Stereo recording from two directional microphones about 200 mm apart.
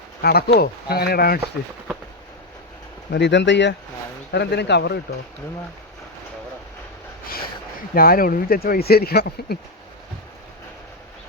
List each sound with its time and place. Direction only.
0.2 s speech: 50° left (ahead or behind)
3.1 s speech: 60° left (ahead or behind)
7.9 s speech: 45° left (ahead or behind)